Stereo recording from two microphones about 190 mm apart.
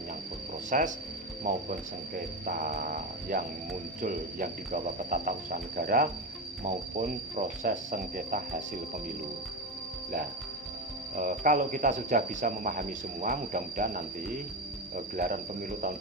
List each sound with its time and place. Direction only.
0.7 s speech: 40° right (ahead or behind)
2.1 s speech: 45° right (ahead or behind)
11.2 s speech: 45° right (ahead or behind)